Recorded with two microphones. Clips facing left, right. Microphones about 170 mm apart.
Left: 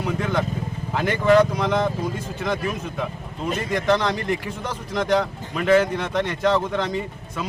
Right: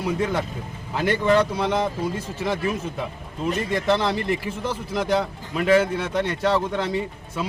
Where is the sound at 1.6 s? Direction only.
5° right (ahead or behind).